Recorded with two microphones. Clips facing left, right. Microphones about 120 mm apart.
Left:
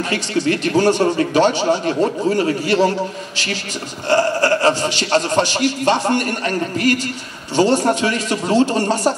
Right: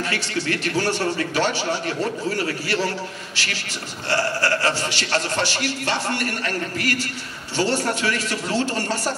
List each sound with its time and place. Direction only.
0.1 s speech: 20° left (ahead or behind)
4.1 s speech: 20° left (ahead or behind)